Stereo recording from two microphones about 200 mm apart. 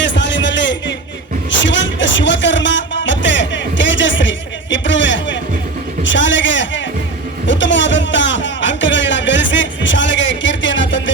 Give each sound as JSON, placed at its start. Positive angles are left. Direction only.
{"t": 0.0, "sound": "music", "side_deg": 65}
{"t": 6.1, "sound": "a sound", "side_deg": 65}
{"t": 7.4, "sound": "music", "side_deg": 65}